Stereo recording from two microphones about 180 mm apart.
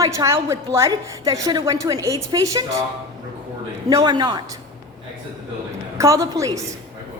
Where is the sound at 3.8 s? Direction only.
20° right (ahead or behind).